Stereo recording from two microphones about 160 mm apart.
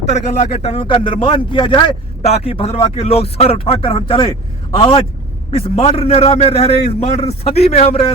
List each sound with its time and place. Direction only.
0.0 s speech: 40° left (ahead or behind)